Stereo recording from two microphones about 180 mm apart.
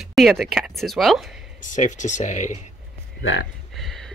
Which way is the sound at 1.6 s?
45° left (ahead or behind).